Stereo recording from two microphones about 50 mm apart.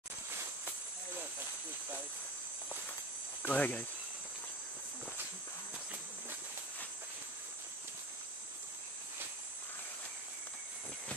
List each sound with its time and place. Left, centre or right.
3.4 s cricket: left